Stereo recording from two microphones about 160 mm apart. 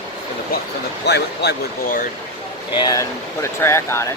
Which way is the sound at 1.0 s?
90° left.